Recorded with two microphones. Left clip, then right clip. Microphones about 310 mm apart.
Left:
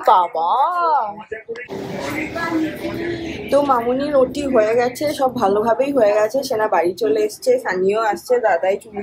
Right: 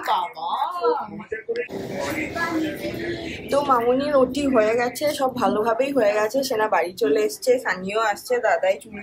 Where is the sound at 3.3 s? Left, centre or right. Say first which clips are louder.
Left 4 dB; centre.